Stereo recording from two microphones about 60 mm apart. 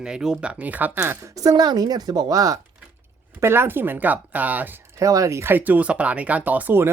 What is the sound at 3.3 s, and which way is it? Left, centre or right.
Speech, right.